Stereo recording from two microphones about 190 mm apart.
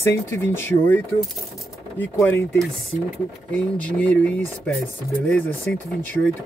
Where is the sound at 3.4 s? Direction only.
5° left (ahead or behind).